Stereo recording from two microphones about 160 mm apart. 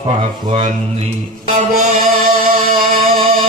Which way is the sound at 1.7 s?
60° right (ahead or behind).